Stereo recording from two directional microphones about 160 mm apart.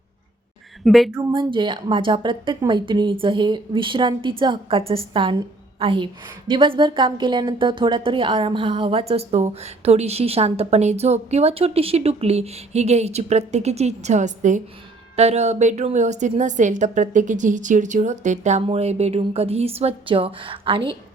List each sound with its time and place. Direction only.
0.9 s speech: centre (ahead or behind)
1.3 s a woman's voice: 30° right (ahead or behind)